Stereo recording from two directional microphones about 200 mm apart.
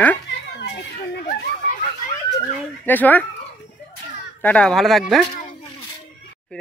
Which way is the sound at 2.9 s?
10° left (ahead or behind).